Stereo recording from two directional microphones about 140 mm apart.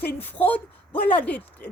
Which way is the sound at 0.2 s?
15° left (ahead or behind).